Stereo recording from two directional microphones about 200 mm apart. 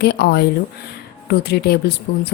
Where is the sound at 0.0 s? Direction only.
55° left (ahead or behind).